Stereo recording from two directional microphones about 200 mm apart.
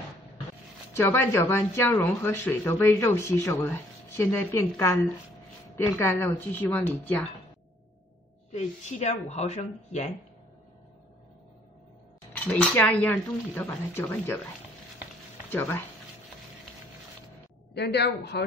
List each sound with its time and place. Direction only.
0.9 s speech: 10° left (ahead or behind)
8.5 s speech: 35° left (ahead or behind)
12.3 s speech: 5° left (ahead or behind)
17.7 s a woman's voice: 55° left (ahead or behind)